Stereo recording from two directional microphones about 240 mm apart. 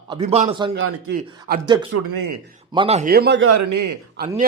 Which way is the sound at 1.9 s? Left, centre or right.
Right.